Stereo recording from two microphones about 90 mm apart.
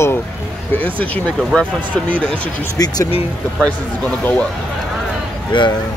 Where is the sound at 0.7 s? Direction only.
20° left (ahead or behind).